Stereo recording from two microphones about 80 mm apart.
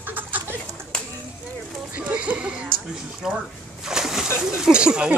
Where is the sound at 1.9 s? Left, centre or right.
Centre.